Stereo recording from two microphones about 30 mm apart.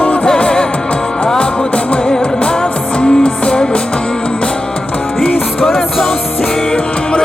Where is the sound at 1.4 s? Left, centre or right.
Left.